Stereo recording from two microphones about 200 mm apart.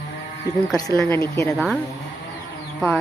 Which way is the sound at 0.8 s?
20° left (ahead or behind).